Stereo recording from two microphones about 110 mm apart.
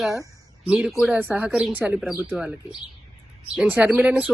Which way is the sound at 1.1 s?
15° right (ahead or behind).